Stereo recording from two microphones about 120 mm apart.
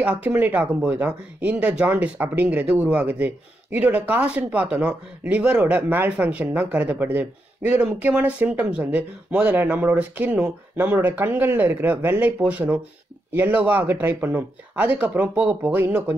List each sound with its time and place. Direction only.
0.0 s speech: 10° right (ahead or behind)